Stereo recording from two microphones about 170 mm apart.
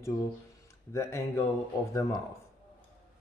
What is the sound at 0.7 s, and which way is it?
Speech, 15° left (ahead or behind).